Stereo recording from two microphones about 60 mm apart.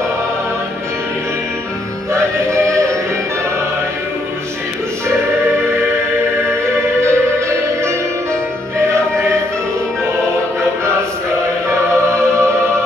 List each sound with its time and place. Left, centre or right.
2.1 s music: right
7.0 s music: right
11.9 s music: right